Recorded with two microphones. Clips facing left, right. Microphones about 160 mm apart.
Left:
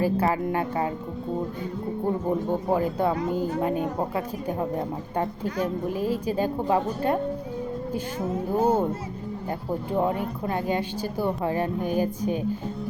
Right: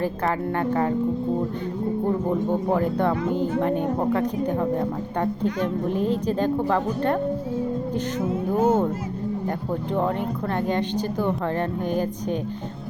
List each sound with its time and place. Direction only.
2.7 s a woman's voice: 15° left (ahead or behind)
6.0 s a woman's voice: 5° left (ahead or behind)
8.2 s speech: 35° left (ahead or behind)
10.7 s a woman's voice: 10° left (ahead or behind)